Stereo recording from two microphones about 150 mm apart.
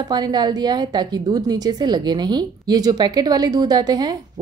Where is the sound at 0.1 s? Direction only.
30° right (ahead or behind).